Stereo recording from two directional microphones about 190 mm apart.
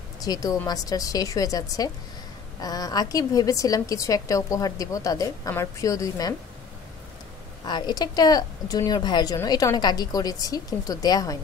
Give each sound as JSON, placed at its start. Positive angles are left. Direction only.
{"t": 0.2, "sound": "a woman's voice", "side_deg": 20}
{"t": 7.6, "sound": "speech", "side_deg": 20}